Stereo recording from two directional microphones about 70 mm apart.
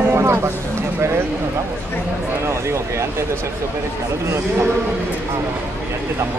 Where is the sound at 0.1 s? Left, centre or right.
Right.